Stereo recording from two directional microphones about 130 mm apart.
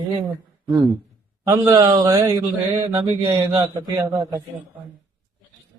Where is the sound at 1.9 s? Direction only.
30° right (ahead or behind).